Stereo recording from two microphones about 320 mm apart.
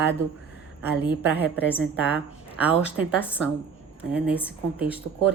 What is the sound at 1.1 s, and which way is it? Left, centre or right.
Speech, centre.